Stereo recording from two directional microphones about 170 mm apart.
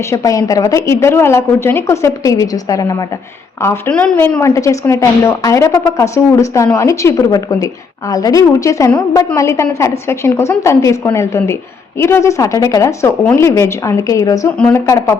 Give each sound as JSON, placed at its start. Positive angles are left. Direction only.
{"t": 0.1, "sound": "a woman's voice", "side_deg": 20}
{"t": 4.4, "sound": "a woman's voice", "side_deg": 15}